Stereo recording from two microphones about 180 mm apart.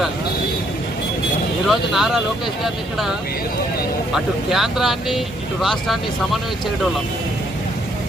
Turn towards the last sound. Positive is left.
turn(degrees=0)  # may be behind; listen again after turning